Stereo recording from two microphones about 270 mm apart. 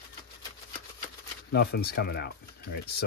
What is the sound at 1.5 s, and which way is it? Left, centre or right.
Speech, left.